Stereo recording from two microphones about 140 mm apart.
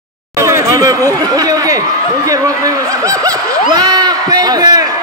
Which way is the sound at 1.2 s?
25° right (ahead or behind).